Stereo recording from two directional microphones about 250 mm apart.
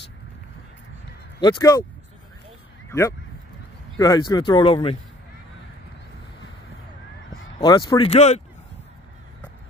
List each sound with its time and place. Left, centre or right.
1.4 s speech: centre
2.9 s speech: centre
7.5 s speech: centre